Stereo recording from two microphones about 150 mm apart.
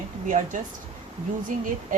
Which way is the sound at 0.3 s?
60° right (ahead or behind).